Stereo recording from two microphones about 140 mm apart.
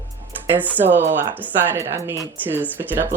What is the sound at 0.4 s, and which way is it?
Speech, 10° right (ahead or behind).